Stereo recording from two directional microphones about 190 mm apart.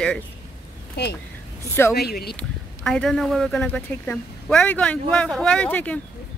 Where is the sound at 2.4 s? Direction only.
5° left (ahead or behind).